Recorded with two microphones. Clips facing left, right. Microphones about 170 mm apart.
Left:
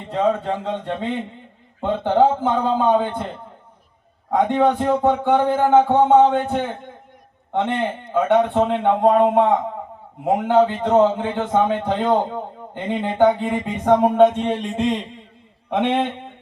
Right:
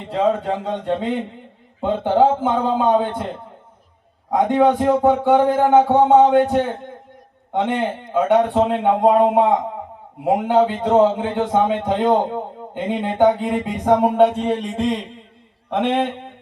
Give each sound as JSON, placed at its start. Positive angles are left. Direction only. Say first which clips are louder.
{"t": 0.0, "sound": "a man's voice", "louder": "right 1 dB", "side_deg": -10}
{"t": 14.3, "sound": "music", "louder": "right 1 dB", "side_deg": -5}